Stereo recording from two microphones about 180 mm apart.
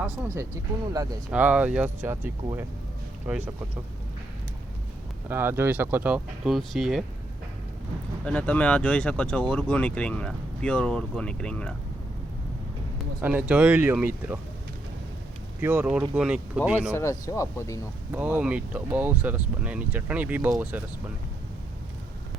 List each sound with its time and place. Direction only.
1.3 s speech: 10° right (ahead or behind)
5.3 s speech: 10° right (ahead or behind)
8.2 s speech: 5° left (ahead or behind)
13.2 s speech: 10° right (ahead or behind)
15.6 s speech: 10° right (ahead or behind)
16.9 s speech: 15° left (ahead or behind)
18.1 s speech: 10° right (ahead or behind)